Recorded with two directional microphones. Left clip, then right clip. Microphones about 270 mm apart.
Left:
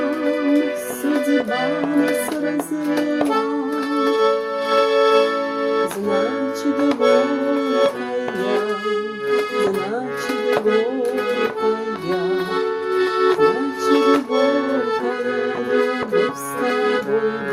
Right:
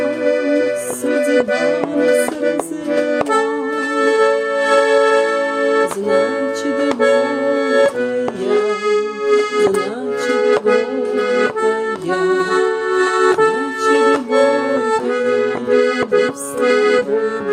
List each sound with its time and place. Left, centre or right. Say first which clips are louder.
0.3 s music: right 4 dB; centre
1.3 s accordion: right 6 dB; centre
3.9 s music: right 4 dB; centre
8.9 s music: right 6 dB; centre
10.3 s accordion: right 4 dB; centre